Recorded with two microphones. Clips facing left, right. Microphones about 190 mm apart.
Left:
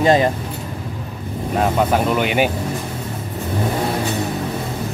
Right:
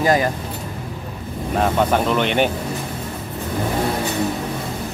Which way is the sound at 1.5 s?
5° left (ahead or behind).